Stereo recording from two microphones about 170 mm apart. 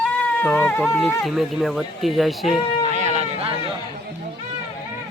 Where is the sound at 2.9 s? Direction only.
40° right (ahead or behind).